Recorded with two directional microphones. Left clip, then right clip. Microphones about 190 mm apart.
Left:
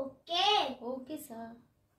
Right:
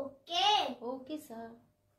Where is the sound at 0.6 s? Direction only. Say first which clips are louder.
Left 1 dB; 30° right (ahead or behind).